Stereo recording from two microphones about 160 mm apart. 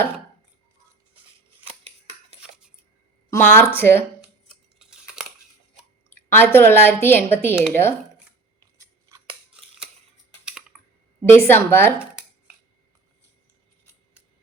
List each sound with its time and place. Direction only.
2.4 s a sound: 5° right (ahead or behind)
3.2 s a woman's voice: 15° left (ahead or behind)
4.8 s a sound: 5° right (ahead or behind)
6.1 s a woman's voice: 15° left (ahead or behind)
8.8 s scissors: 20° right (ahead or behind)
10.4 s typing: 5° right (ahead or behind)
11.3 s a woman's voice: 15° left (ahead or behind)